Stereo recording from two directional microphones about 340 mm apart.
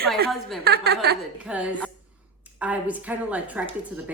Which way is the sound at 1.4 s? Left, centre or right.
Centre.